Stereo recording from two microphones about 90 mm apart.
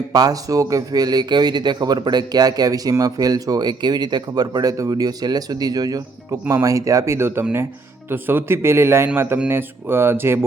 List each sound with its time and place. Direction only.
0.1 s a man's voice: 45° right (ahead or behind); by 10.4 s 25° right (ahead or behind)